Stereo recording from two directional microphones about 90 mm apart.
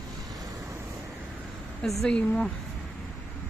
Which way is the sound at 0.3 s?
45° right (ahead or behind).